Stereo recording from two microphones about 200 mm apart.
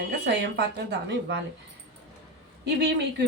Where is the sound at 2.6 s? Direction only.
60° right (ahead or behind).